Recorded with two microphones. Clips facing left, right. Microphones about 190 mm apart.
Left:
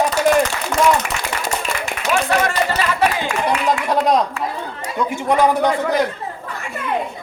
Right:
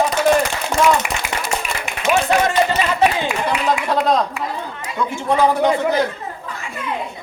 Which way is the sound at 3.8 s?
15° left (ahead or behind).